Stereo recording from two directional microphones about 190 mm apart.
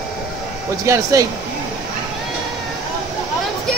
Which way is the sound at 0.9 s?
15° right (ahead or behind).